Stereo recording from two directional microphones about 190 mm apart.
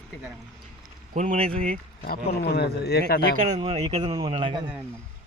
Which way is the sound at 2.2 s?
60° left (ahead or behind).